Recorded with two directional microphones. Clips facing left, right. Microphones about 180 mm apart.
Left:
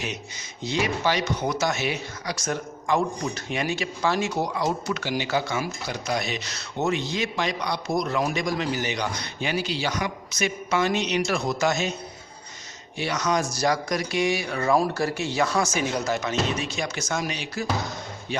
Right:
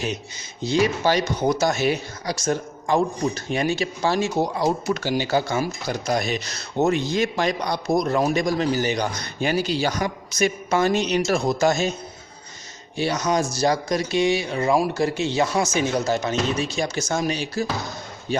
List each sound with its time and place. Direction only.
0.6 s speech: 35° right (ahead or behind)
2.3 s a man's voice: 30° right (ahead or behind)
13.0 s speech: 30° right (ahead or behind)